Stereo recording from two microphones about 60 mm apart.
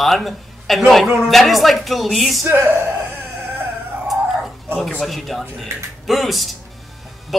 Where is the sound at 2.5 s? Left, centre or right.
Right.